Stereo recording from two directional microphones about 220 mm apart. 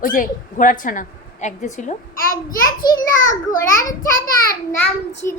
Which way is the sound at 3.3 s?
15° left (ahead or behind).